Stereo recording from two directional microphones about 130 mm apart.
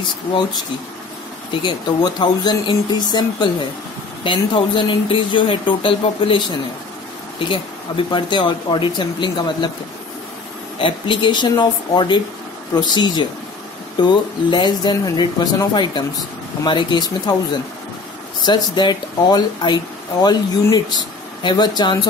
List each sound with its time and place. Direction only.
1.6 s speech: 35° left (ahead or behind)
10.8 s speech: 40° left (ahead or behind)